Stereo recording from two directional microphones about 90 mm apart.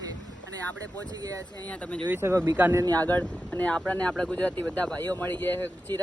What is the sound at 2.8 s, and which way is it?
Speech, 45° right (ahead or behind).